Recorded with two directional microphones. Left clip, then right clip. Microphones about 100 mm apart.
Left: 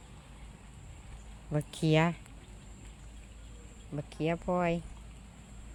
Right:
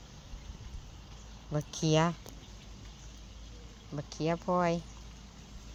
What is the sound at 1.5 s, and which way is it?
Speech, 50° left (ahead or behind).